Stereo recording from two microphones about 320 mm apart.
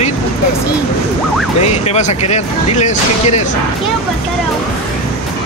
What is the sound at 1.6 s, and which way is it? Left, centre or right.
Speech, centre.